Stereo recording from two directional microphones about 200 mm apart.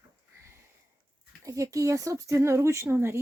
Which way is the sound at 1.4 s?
15° right (ahead or behind).